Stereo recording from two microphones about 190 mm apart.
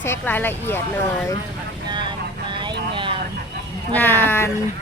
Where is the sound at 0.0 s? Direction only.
10° left (ahead or behind).